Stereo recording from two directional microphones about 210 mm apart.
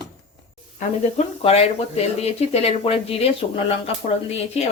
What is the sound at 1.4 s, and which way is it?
Speech, 30° left (ahead or behind).